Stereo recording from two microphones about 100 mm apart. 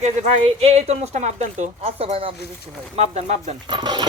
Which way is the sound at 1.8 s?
75° right (ahead or behind).